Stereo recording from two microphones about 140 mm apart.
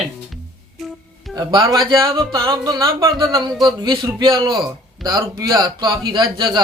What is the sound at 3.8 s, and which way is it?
A man's voice, 35° right (ahead or behind).